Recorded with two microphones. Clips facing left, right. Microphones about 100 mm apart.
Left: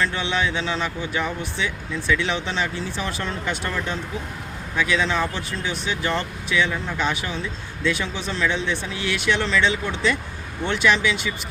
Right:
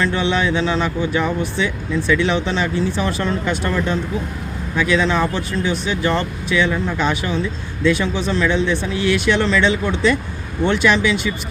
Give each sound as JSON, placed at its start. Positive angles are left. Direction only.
{"t": 0.0, "sound": "speech", "side_deg": -45}
{"t": 4.8, "sound": "speech", "side_deg": -50}